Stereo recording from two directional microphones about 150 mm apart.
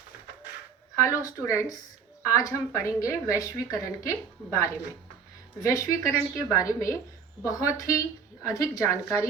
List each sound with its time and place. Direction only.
0.9 s a woman's voice: 20° left (ahead or behind)